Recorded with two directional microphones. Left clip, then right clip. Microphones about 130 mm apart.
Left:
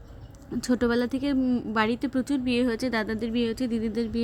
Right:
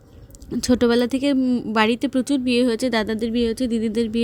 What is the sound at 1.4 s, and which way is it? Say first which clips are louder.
Speech: right 5 dB; 30° right (ahead or behind).